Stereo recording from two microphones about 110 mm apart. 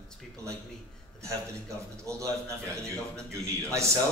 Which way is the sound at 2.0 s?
25° right (ahead or behind).